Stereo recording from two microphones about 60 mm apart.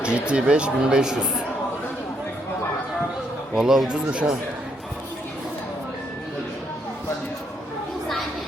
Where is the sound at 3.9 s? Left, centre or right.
Centre.